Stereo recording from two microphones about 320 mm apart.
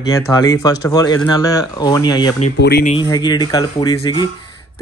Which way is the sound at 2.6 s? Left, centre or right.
Left.